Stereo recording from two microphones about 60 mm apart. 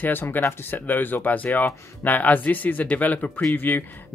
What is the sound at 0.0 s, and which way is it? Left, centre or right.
Speech, left.